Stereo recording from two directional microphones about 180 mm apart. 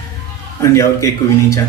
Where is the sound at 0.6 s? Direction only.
15° left (ahead or behind).